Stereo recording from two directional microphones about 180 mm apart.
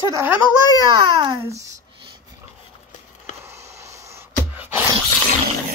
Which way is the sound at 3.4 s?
15° right (ahead or behind).